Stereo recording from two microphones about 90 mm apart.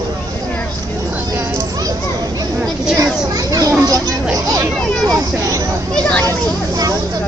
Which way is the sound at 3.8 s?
40° right (ahead or behind).